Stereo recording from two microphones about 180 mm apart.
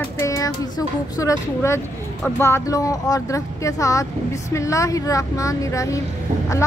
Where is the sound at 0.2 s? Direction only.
20° left (ahead or behind).